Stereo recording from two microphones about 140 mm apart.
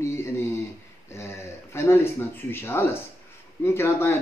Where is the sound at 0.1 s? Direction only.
20° left (ahead or behind).